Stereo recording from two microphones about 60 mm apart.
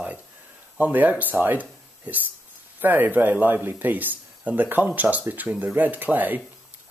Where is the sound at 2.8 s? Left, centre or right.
Right.